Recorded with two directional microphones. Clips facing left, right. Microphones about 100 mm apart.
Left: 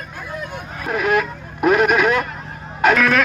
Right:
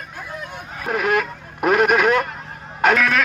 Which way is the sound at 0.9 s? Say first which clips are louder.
Left 1 dB; 50° right (ahead or behind).